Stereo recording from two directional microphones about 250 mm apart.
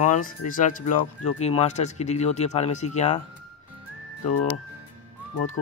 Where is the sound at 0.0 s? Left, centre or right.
Left.